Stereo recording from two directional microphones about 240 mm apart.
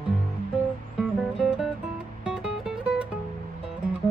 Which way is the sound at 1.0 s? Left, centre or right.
Centre.